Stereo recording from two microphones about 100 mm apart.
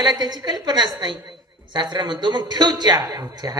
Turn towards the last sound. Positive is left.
turn(degrees=-40)  # may be behind; listen again after turning